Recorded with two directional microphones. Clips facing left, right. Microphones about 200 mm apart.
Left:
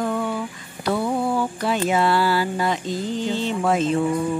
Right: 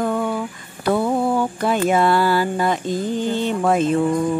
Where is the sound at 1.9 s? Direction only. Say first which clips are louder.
Right 3 dB; 50° right (ahead or behind).